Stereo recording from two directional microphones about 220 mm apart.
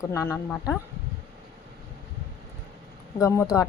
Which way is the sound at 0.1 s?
10° left (ahead or behind).